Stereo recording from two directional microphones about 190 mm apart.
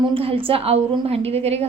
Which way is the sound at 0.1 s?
30° right (ahead or behind).